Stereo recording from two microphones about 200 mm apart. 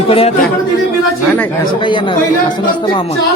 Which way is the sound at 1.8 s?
25° left (ahead or behind).